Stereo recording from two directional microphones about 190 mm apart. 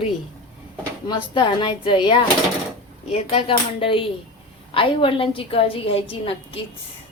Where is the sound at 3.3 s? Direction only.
30° left (ahead or behind).